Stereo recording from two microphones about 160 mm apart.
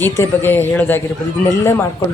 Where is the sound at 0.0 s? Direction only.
10° left (ahead or behind).